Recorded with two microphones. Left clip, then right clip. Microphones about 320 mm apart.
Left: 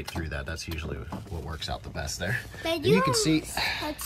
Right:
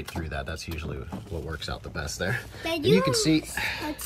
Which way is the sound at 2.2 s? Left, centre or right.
Centre.